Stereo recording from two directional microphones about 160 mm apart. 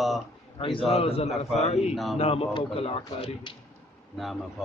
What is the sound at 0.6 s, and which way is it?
Speech, 35° left (ahead or behind).